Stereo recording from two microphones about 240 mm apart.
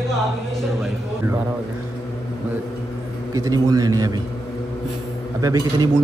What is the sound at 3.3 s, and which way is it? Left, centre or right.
Speech, centre.